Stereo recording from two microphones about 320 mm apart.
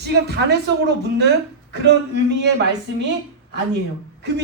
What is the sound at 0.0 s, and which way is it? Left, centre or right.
A man's voice, right.